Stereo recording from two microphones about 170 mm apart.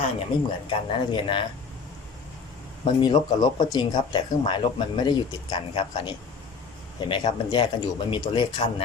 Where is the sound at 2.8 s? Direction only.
25° left (ahead or behind).